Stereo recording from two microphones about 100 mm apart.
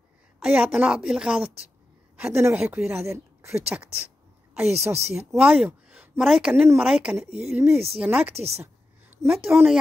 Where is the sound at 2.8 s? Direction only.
25° right (ahead or behind).